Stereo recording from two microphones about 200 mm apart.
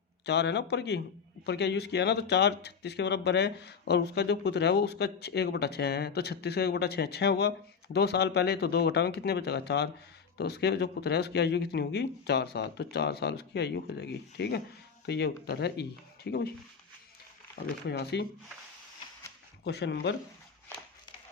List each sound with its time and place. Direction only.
0.3 s speech: 60° left (ahead or behind)
17.8 s speech: 55° left (ahead or behind)
19.6 s speech: 60° left (ahead or behind)